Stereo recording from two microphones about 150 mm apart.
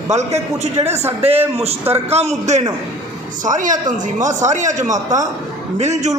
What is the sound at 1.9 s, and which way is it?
Speech, 45° right (ahead or behind).